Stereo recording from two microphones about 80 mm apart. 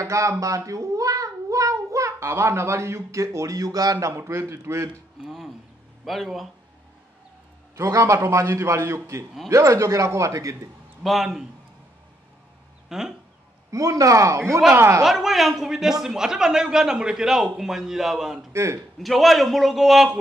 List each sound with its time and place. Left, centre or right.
0.0 s a child's voice: right
4.1 s a man's voice: right
5.2 s a sound: centre
6.0 s a man's voice: centre
7.7 s a man's voice: right
11.0 s a man's voice: centre
12.9 s a man's voice: centre
13.7 s a man's voice: right
15.0 s a man's voice: centre
18.5 s a man's voice: right
18.9 s a man's voice: centre